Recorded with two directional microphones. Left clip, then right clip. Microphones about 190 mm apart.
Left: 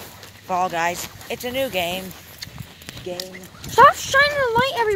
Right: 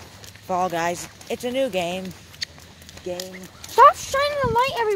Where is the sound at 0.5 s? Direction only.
40° right (ahead or behind).